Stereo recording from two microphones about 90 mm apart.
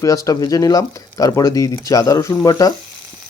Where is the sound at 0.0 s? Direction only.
40° left (ahead or behind).